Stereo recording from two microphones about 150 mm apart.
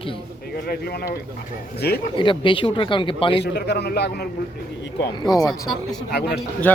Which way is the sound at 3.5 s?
90° left.